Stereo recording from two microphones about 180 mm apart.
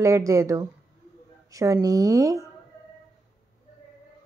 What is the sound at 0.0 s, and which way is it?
A woman's voice, 15° right (ahead or behind).